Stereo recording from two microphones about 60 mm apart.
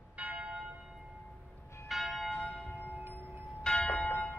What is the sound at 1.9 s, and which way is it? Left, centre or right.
Church bell, centre.